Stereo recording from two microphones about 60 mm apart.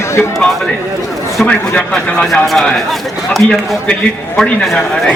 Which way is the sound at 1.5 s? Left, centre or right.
Centre.